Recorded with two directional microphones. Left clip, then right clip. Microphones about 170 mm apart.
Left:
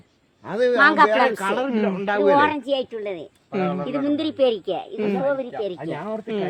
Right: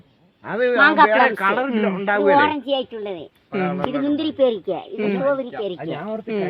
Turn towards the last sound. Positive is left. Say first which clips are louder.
# right 2 dB
turn(degrees=-15)  # may be behind; listen again after turning